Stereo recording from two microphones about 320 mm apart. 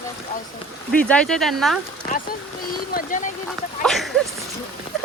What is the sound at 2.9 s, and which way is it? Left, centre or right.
Speech, left.